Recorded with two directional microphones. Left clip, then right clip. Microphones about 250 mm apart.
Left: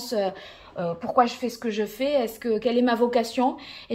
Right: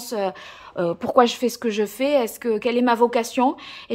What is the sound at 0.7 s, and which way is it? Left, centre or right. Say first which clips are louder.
A woman's voice: right 4 dB; right.